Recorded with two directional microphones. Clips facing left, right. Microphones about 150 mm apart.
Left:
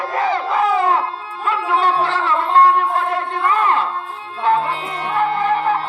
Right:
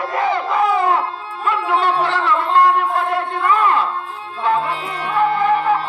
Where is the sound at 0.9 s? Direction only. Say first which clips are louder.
Even; 30° left (ahead or behind).